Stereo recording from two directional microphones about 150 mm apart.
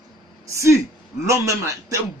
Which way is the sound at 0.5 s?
20° right (ahead or behind).